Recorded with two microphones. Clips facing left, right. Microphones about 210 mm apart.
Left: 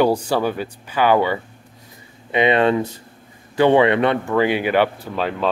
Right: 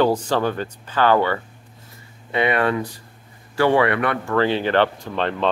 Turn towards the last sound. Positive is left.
turn(degrees=5)  # may be behind; listen again after turning